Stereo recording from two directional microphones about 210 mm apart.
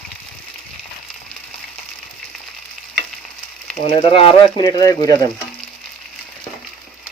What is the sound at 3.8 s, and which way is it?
Speech, 25° left (ahead or behind).